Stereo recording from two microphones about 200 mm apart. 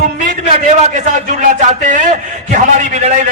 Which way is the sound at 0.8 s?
40° right (ahead or behind).